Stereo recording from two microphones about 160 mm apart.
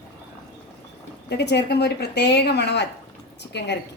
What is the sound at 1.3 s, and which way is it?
A woman's voice, 90° left.